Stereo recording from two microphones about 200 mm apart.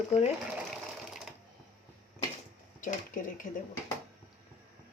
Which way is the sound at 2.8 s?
40° left (ahead or behind).